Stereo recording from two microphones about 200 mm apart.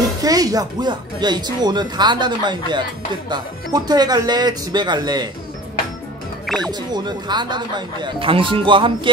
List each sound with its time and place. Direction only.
0.2 s speech: 20° right (ahead or behind)
6.4 s music: centre (ahead or behind)
6.7 s speech: 20° right (ahead or behind)